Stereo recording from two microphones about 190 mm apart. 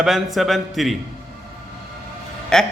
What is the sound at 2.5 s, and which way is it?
Speech, 5° left (ahead or behind).